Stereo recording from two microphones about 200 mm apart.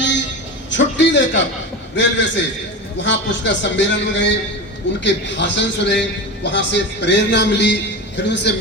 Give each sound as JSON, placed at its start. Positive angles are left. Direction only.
{"t": 0.7, "sound": "a man's voice", "side_deg": 65}